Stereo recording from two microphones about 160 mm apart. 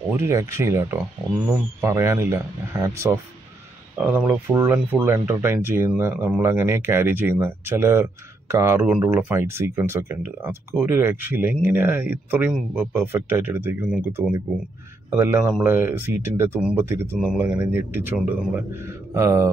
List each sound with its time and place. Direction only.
0.1 s speech: 15° right (ahead or behind)